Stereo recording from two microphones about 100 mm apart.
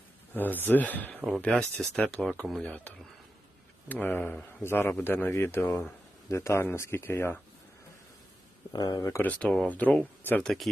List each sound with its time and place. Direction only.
0.3 s speech: 20° left (ahead or behind)
8.7 s speech: 40° left (ahead or behind)
9.2 s speech: 15° left (ahead or behind)
10.4 s speech: centre (ahead or behind)